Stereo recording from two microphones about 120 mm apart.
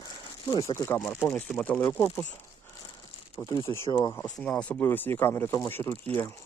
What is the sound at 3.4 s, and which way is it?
Speech, 25° left (ahead or behind).